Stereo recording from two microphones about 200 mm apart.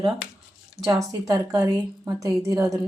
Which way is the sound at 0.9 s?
15° right (ahead or behind).